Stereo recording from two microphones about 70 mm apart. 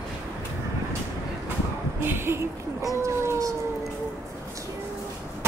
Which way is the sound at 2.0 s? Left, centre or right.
Right.